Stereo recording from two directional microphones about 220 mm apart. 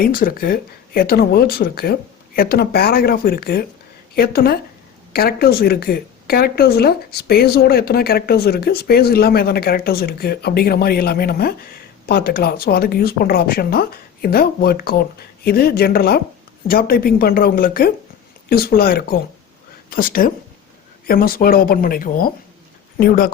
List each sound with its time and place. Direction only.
0.0 s speech: 40° left (ahead or behind)